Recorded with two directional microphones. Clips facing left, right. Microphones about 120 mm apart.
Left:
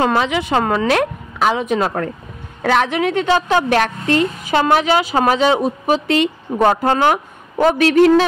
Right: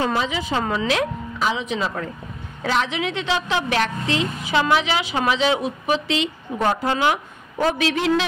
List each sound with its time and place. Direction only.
0.0 s a woman's voice: 65° left (ahead or behind); by 8.3 s 50° left (ahead or behind)